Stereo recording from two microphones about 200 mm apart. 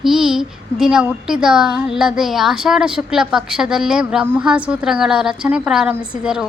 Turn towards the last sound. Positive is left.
turn(degrees=-5)  # may be behind; listen again after turning